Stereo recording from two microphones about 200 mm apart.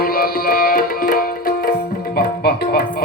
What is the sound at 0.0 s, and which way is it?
Music, 45° left (ahead or behind).